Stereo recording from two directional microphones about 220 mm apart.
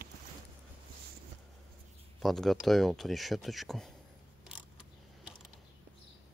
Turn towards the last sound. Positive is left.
turn(degrees=-5)  # may be behind; listen again after turning